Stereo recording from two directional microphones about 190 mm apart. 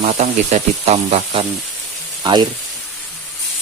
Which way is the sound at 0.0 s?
35° right (ahead or behind).